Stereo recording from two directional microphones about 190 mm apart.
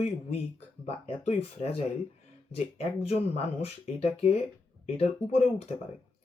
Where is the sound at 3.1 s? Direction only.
30° left (ahead or behind).